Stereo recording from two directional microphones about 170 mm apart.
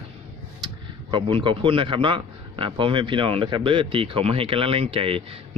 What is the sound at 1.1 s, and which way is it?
A man's voice, 30° right (ahead or behind).